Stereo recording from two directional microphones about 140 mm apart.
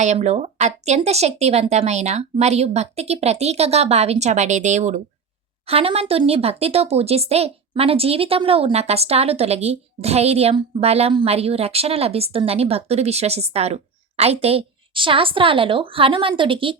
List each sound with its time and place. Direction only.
0.0 s speech: 55° right (ahead or behind)
5.6 s speech: 45° right (ahead or behind)